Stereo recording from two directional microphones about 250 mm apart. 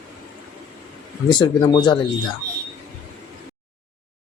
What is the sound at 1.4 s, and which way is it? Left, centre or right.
Speech, centre.